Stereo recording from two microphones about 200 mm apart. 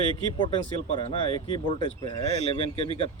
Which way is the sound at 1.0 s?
25° left (ahead or behind).